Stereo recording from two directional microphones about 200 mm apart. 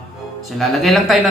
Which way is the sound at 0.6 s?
Centre (ahead or behind).